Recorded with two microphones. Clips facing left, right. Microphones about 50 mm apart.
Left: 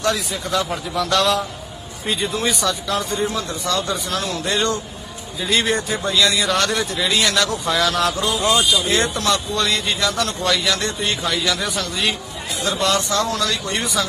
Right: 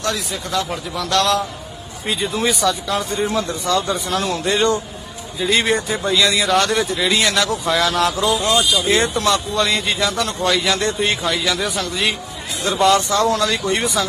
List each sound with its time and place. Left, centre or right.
0.0 s speech: centre
3.3 s a man's voice: right
5.4 s speech: centre
10.7 s speech: centre
11.2 s speech: centre
12.8 s speech: right
13.5 s speech: centre
13.8 s speech: right